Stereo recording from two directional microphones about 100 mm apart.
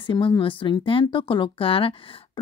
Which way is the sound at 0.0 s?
55° left (ahead or behind).